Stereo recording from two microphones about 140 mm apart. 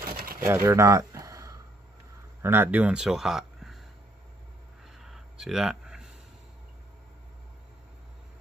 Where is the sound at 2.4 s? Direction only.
15° right (ahead or behind).